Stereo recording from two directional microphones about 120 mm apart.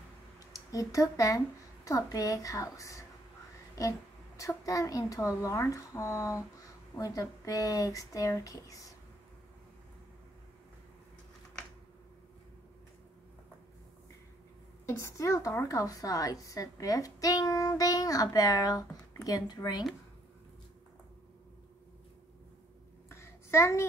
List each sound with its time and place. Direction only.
0.5 s a woman's voice: 30° left (ahead or behind)
4.4 s a woman's voice: 25° left (ahead or behind)
14.9 s a woman's voice: 25° left (ahead or behind)
23.0 s a sound: 20° left (ahead or behind)